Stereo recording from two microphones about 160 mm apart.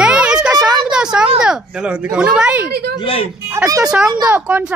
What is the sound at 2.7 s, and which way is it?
Speech, 80° right.